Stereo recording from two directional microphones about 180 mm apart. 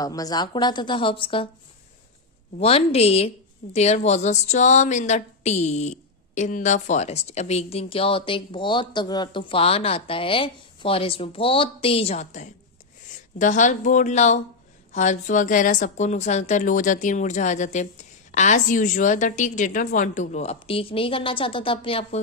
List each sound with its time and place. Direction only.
0.0 s a woman's voice: 20° left (ahead or behind)
2.6 s a woman's voice: 35° left (ahead or behind)